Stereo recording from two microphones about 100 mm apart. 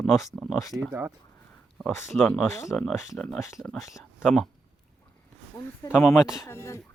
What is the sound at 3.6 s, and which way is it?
Speech, centre (ahead or behind).